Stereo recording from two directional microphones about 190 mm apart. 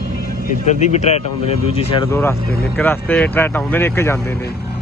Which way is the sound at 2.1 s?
15° left (ahead or behind).